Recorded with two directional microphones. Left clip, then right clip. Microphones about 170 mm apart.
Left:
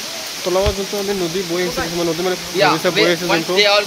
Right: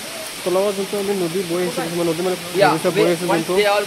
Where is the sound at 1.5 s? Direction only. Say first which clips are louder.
Left 3 dB; centre (ahead or behind).